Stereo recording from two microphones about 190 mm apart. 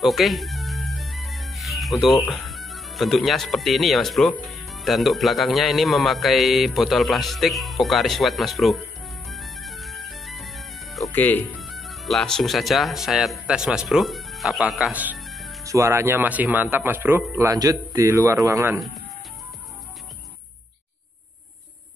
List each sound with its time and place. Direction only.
0.0 s speech: centre (ahead or behind)
9.3 s music: centre (ahead or behind)
11.5 s speech: centre (ahead or behind)
15.6 s speech: 15° right (ahead or behind)